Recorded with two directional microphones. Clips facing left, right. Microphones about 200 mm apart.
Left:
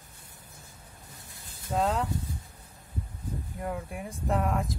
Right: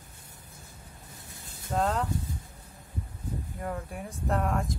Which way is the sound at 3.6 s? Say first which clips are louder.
Left 2 dB; 5° left (ahead or behind).